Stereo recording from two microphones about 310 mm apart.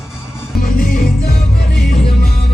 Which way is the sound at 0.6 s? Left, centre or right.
Left.